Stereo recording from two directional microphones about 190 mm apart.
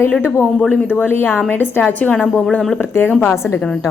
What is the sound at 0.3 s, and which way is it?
A woman's voice, 5° left (ahead or behind).